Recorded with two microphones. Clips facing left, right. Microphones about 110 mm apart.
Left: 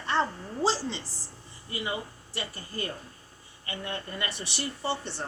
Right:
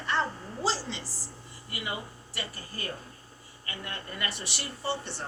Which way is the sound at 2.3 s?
25° left (ahead or behind).